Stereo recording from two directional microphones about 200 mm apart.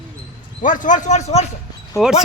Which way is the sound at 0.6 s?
40° left (ahead or behind).